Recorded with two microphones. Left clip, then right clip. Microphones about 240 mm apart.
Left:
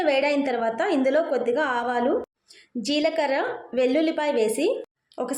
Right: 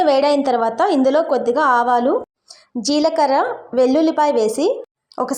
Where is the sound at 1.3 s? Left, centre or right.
Centre.